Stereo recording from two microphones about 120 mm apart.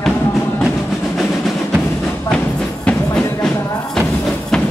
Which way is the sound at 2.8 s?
5° left (ahead or behind).